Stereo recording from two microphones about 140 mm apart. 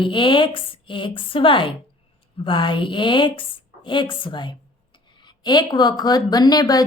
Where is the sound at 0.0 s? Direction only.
35° left (ahead or behind).